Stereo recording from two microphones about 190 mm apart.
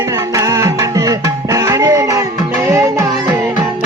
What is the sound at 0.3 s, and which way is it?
Music, 15° right (ahead or behind).